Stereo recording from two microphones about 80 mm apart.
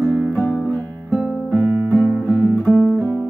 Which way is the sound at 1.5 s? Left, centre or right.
Right.